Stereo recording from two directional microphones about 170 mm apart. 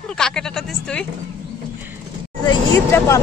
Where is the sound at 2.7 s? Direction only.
15° left (ahead or behind).